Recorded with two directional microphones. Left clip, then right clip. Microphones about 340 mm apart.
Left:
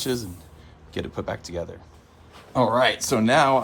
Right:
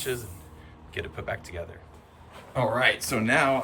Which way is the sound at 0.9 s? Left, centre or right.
Centre.